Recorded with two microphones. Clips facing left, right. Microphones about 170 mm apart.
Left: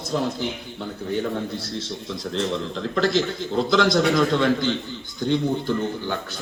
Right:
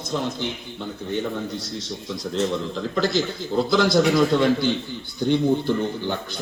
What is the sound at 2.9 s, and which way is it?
A man's voice, 5° right (ahead or behind).